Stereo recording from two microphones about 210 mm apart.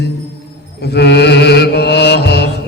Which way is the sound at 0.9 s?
50° left (ahead or behind).